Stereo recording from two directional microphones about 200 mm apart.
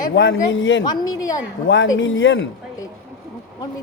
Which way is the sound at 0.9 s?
20° left (ahead or behind).